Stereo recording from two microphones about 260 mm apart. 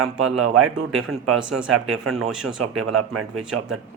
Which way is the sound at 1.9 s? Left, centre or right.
Right.